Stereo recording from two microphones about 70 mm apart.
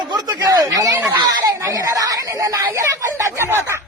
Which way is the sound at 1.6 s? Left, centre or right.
Right.